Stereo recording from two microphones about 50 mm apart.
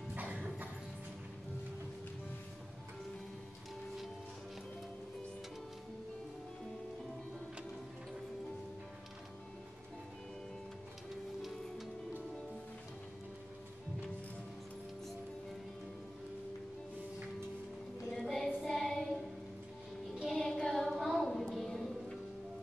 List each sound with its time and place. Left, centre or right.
0.1 s music: right
18.1 s music: centre
18.6 s child singing: centre
20.3 s a sound: centre
21.1 s music: centre